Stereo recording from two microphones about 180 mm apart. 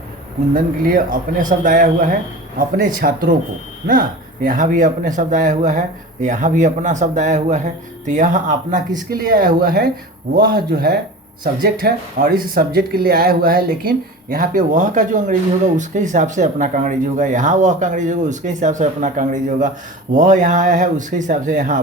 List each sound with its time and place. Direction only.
0.5 s speech: 50° right (ahead or behind)
4.4 s a man's voice: 45° right (ahead or behind)